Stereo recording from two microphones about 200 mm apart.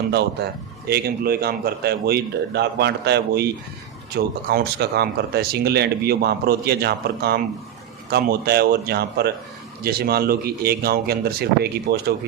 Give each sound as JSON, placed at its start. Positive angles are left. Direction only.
{"t": 0.1, "sound": "speech", "side_deg": -55}